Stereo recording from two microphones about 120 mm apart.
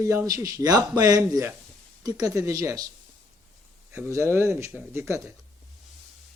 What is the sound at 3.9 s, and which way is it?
Speech, 20° right (ahead or behind).